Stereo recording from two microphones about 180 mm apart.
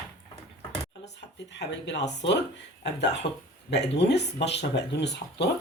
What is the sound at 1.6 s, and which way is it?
Speech, 75° left (ahead or behind).